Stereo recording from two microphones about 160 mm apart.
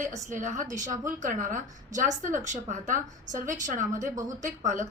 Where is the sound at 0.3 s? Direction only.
50° right (ahead or behind).